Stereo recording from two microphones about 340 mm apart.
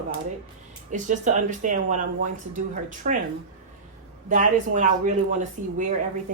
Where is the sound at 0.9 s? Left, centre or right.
Right.